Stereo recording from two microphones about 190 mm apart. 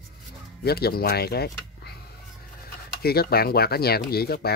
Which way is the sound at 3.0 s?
55° left (ahead or behind).